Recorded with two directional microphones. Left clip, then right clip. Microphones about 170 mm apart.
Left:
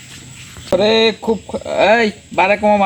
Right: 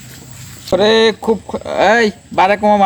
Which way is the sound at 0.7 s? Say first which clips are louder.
Right 2 dB; 25° right (ahead or behind).